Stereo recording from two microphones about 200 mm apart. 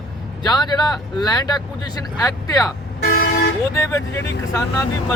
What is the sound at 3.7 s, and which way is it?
Speech, 15° left (ahead or behind).